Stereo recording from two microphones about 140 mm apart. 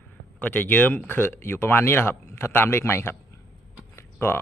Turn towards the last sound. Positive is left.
turn(degrees=15)  # may be behind; listen again after turning